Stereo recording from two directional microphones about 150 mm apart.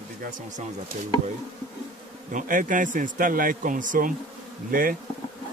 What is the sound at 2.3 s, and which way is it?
Speech, 60° right (ahead or behind).